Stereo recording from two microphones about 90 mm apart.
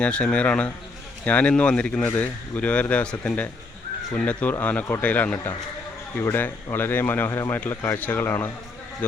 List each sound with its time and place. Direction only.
0.0 s speech: 10° left (ahead or behind)
7.7 s speech: 35° left (ahead or behind)
7.9 s speech: 20° left (ahead or behind)